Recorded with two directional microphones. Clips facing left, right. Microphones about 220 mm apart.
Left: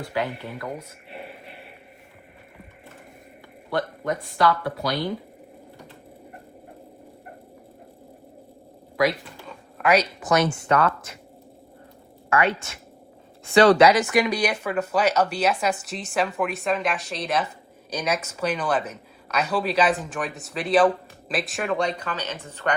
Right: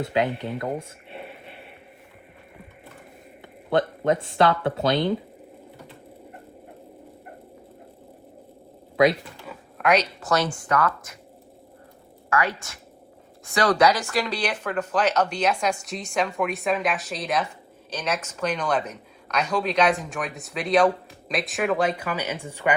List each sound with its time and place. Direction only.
0.0 s speech: 20° right (ahead or behind)
3.7 s speech: 25° right (ahead or behind)
9.5 s a woman's voice: centre (ahead or behind); by 11.2 s 25° left (ahead or behind)
12.3 s a woman's voice: 25° left (ahead or behind); by 22.7 s 10° right (ahead or behind)